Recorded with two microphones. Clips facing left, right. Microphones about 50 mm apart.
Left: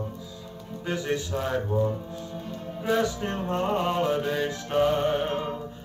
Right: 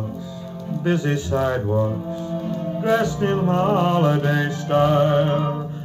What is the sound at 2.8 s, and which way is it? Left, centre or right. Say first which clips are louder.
Music: right 5 dB; right.